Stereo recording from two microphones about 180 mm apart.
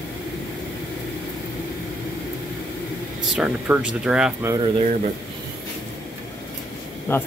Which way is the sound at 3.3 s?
5° right (ahead or behind).